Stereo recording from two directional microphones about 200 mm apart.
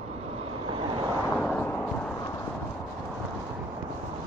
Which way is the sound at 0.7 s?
25° right (ahead or behind).